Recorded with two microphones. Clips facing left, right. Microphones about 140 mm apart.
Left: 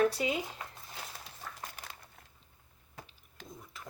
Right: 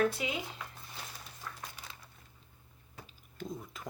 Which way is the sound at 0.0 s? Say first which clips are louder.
Left 2 dB; 35° left (ahead or behind).